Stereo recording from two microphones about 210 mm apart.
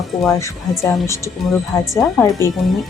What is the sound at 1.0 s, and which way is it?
Speech, 15° left (ahead or behind).